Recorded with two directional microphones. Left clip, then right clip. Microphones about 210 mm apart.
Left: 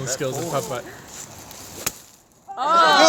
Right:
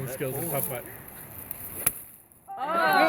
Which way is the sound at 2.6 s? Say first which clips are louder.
Left 8 dB; 55° left (ahead or behind).